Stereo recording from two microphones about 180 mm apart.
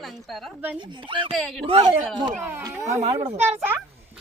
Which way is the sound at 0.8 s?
25° right (ahead or behind).